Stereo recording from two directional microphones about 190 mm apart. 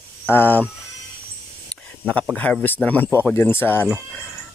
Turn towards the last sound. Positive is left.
turn(degrees=10)  # may be behind; listen again after turning